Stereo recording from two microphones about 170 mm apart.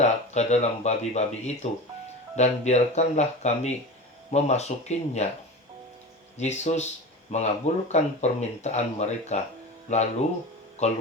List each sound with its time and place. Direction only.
0.0 s speech: 40° left (ahead or behind)
6.3 s speech: 40° left (ahead or behind)